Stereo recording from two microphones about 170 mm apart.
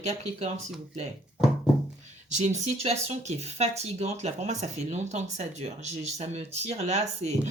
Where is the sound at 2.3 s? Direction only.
40° right (ahead or behind).